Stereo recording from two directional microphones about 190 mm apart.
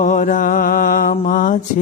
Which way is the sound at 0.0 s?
40° left (ahead or behind).